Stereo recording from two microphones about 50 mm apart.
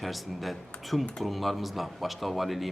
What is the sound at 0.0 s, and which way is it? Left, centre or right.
Speech, centre.